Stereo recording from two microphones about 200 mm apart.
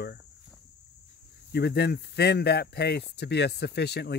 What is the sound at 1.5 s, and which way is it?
Speech, 55° left (ahead or behind).